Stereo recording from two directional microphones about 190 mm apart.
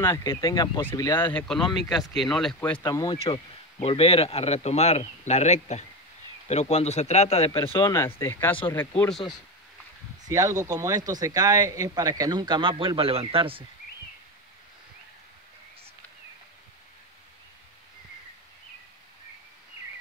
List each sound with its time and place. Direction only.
0.0 s speech: 15° left (ahead or behind)
1.3 s speech: centre (ahead or behind)
2.8 s speech: 20° left (ahead or behind)
3.8 s speech: 30° left (ahead or behind)
7.8 s speech: 15° left (ahead or behind)
10.2 s speech: 20° right (ahead or behind)